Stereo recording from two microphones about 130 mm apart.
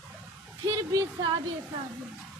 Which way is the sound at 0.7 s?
25° right (ahead or behind).